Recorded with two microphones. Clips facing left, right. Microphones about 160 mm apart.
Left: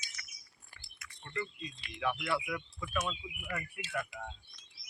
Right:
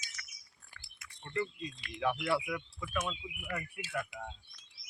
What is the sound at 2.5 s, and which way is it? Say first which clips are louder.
Speech: right 1 dB; 5° right (ahead or behind).